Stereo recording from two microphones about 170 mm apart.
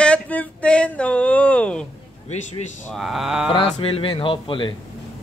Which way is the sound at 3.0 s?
Centre (ahead or behind).